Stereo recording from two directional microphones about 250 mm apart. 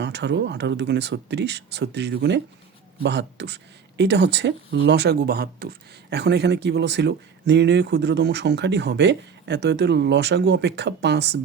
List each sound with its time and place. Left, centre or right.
0.0 s speech: right